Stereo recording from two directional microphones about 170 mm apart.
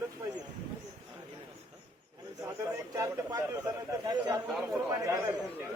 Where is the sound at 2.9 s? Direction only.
20° right (ahead or behind).